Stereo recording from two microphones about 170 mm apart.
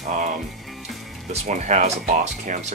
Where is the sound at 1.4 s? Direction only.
45° right (ahead or behind).